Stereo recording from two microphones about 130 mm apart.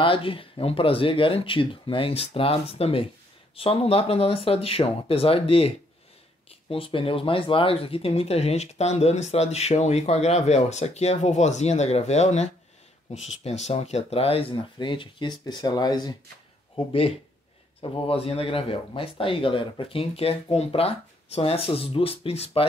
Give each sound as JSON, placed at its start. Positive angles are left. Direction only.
{"t": 0.0, "sound": "speech", "side_deg": 45}
{"t": 6.7, "sound": "speech", "side_deg": 45}
{"t": 16.7, "sound": "speech", "side_deg": 45}